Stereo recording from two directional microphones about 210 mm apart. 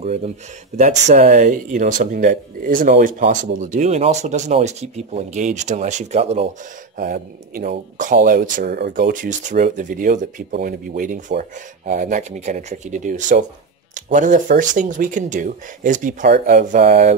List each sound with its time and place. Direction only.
0.0 s speech: 30° right (ahead or behind)
7.0 s speech: 45° right (ahead or behind)